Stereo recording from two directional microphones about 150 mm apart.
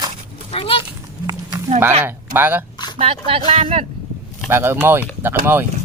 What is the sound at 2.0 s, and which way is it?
Speech, 15° right (ahead or behind).